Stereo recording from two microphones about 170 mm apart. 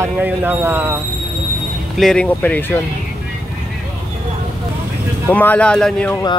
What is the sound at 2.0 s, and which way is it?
Speech, 5° left (ahead or behind).